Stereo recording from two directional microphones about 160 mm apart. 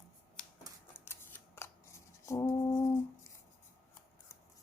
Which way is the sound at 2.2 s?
20° left (ahead or behind).